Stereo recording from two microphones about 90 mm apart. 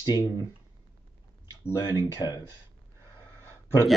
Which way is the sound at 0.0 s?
50° left (ahead or behind).